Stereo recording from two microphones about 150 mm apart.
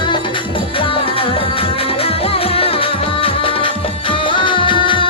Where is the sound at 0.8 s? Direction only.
35° left (ahead or behind).